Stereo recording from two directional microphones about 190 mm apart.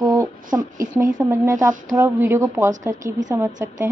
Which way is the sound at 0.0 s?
20° right (ahead or behind).